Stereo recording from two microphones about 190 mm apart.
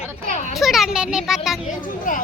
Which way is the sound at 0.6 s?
Centre (ahead or behind).